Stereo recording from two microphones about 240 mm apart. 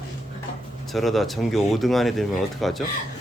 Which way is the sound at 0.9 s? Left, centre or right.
Centre.